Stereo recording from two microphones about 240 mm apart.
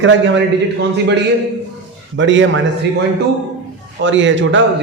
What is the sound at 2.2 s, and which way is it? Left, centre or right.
Speech, right.